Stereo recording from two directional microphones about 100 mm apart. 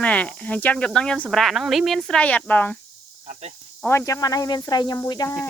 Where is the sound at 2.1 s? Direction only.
15° left (ahead or behind).